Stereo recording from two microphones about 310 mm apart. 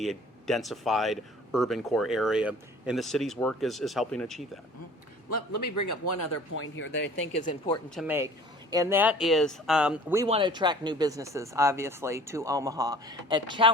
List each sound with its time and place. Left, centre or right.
0.0 s speech: centre
5.5 s speech: left
6.5 s speech: left
7.9 s speech: centre
10.2 s speech: centre